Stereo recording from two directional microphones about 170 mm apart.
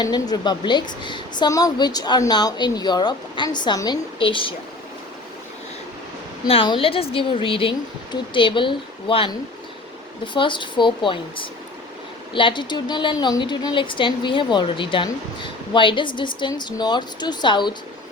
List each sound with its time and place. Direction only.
0.0 s a woman's voice: 25° left (ahead or behind)
6.5 s a woman's voice: 30° left (ahead or behind)
10.3 s a woman's voice: 30° left (ahead or behind)